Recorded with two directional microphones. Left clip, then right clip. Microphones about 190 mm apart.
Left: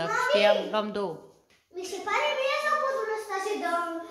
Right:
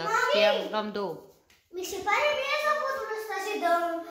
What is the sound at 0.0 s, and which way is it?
A child's voice, 5° left (ahead or behind).